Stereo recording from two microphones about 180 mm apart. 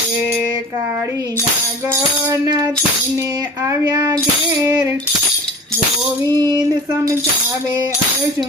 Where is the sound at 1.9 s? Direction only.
20° right (ahead or behind).